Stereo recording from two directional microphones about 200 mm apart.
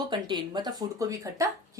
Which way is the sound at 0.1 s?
20° right (ahead or behind).